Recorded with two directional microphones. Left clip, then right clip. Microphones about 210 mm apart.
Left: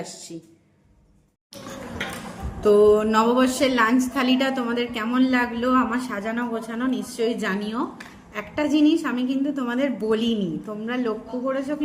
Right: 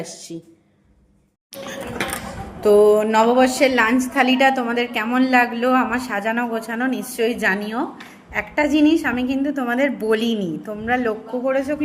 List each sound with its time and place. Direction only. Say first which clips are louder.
0.0 s speech: right 3 dB; 15° right (ahead or behind)
2.6 s a woman's voice: right 3 dB; 10° left (ahead or behind)